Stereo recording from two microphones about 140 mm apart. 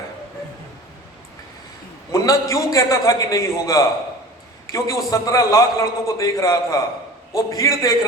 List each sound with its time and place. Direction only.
2.1 s a man's voice: 25° left (ahead or behind)